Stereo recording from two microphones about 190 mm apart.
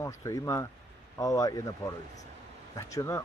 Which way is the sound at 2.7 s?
15° left (ahead or behind).